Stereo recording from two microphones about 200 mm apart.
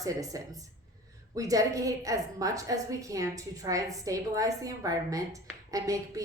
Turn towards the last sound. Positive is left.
turn(degrees=-15)  # may be behind; listen again after turning